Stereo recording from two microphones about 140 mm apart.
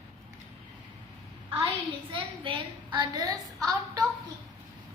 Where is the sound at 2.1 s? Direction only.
40° right (ahead or behind).